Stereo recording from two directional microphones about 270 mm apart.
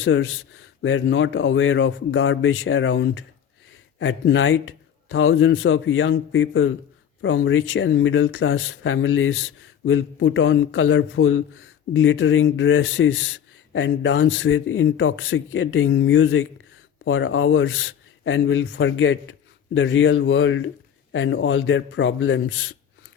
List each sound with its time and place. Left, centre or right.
0.0 s a man's voice: left